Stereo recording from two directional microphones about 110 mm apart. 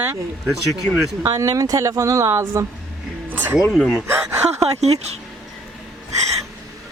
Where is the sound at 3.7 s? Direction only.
Centre (ahead or behind).